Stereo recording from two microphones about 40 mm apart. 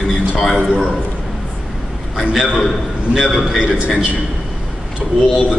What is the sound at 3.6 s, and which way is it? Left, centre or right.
Speech, right.